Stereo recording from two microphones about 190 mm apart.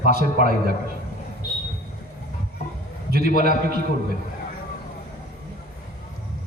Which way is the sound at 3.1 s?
55° right (ahead or behind).